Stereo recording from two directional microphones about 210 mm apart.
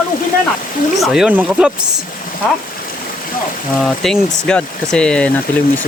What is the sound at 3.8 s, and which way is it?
Speech, centre (ahead or behind).